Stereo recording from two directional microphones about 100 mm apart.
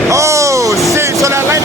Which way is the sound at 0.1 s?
30° right (ahead or behind).